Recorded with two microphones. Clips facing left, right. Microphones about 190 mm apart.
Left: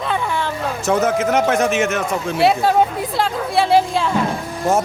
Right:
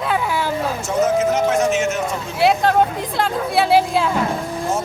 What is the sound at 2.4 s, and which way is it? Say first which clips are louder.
A woman's voice: even; centre (ahead or behind).